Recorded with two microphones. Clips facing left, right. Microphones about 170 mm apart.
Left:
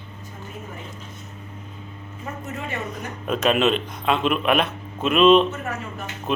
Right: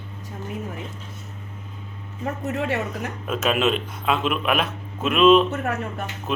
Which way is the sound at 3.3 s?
5° right (ahead or behind).